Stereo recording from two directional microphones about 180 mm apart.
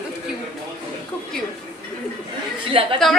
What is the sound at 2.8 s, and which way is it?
Speech, 30° right (ahead or behind).